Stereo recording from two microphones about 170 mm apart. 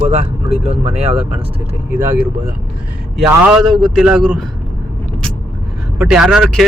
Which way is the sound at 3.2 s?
10° right (ahead or behind).